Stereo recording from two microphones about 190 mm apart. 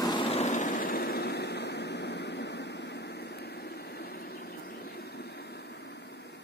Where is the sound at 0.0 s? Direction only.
25° left (ahead or behind).